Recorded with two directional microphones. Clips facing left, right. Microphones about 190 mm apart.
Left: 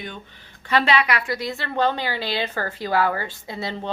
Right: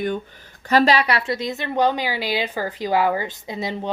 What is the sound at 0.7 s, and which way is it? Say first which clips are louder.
A woman's voice: right 3 dB; 40° right (ahead or behind).